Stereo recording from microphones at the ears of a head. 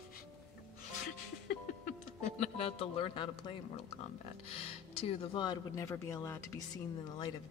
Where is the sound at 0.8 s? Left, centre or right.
Left.